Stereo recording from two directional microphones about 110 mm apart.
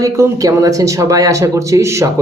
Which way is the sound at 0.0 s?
30° right (ahead or behind).